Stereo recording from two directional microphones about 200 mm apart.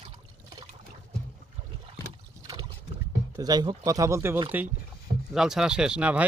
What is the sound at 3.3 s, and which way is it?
Speech, 20° right (ahead or behind).